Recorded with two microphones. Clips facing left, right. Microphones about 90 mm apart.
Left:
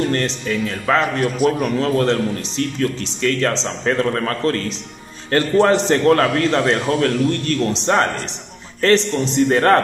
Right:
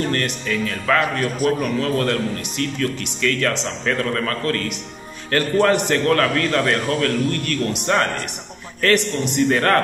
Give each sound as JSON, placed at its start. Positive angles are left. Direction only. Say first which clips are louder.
{"t": 0.1, "sound": "speech", "louder": "left 2 dB", "side_deg": 30}